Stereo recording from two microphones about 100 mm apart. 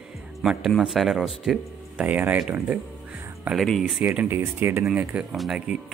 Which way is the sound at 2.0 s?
15° right (ahead or behind).